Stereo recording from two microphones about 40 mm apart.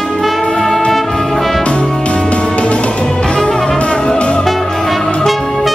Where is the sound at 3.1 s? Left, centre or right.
Centre.